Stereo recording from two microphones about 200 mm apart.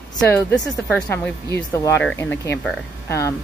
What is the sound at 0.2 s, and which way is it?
Speech, 5° left (ahead or behind).